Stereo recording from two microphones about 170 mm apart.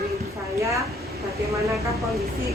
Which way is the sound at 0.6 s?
20° right (ahead or behind).